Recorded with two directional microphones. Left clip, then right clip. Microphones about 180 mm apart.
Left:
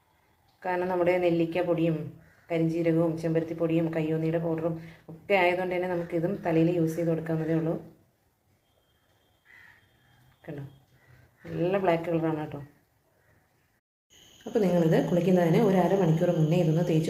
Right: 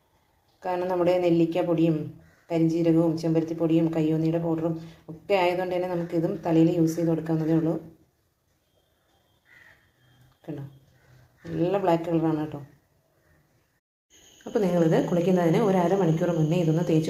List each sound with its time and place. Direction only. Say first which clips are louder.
0.6 s a woman's voice: right 2 dB; 5° right (ahead or behind)
11.6 s speech: right 2 dB; 10° right (ahead or behind)
14.5 s a woman's voice: right 2 dB; centre (ahead or behind)